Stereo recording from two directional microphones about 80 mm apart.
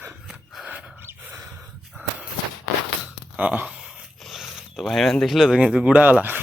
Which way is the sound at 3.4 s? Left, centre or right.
Centre.